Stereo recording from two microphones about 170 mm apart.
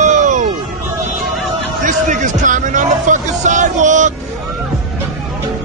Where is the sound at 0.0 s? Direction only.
45° right (ahead or behind).